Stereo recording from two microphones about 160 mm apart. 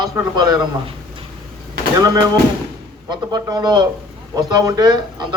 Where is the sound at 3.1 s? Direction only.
25° right (ahead or behind).